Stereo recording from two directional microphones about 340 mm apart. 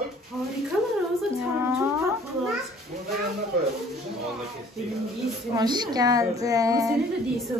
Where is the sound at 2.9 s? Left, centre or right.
Right.